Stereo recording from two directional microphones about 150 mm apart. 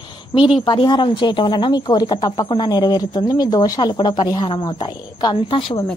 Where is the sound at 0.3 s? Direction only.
35° left (ahead or behind).